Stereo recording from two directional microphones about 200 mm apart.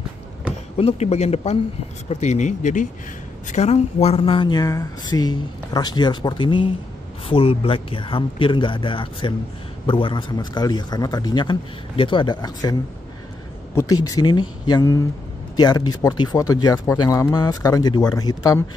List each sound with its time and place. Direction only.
0.7 s speech: 30° left (ahead or behind)
13.7 s speech: 15° left (ahead or behind)